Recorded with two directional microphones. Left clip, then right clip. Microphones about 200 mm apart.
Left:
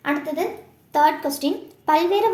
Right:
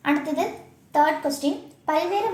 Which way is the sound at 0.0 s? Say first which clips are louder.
Even; 5° left (ahead or behind).